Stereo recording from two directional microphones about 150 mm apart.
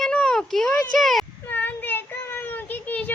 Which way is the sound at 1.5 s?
10° left (ahead or behind).